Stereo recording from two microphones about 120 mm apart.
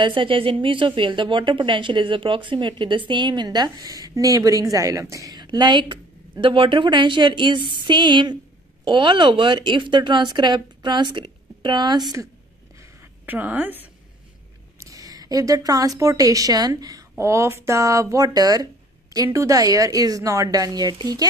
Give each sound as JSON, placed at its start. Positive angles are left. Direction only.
{"t": 0.0, "sound": "a woman's voice", "side_deg": -45}
{"t": 13.2, "sound": "a woman's voice", "side_deg": -15}
{"t": 14.8, "sound": "a sound", "side_deg": -30}
{"t": 16.0, "sound": "a woman's voice", "side_deg": -25}